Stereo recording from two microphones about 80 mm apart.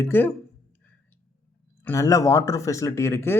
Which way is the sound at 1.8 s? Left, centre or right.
Left.